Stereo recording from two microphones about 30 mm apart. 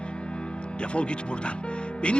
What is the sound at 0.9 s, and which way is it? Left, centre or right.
Speech, left.